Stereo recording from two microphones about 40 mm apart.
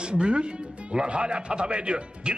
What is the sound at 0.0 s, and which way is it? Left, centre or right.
A man's voice, right.